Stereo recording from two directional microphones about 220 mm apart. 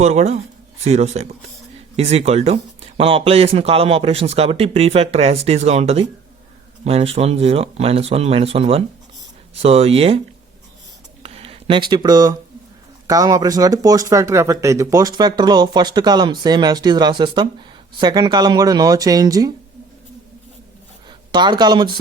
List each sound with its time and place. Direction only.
0.0 s speech: 30° right (ahead or behind)
11.2 s a sound: 25° right (ahead or behind)
13.1 s speech: 15° right (ahead or behind)
21.1 s speech: 20° right (ahead or behind)